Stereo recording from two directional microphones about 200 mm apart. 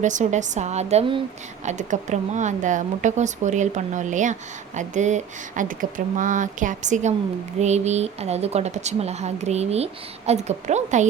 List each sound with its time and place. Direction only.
0.0 s a woman's voice: 35° right (ahead or behind)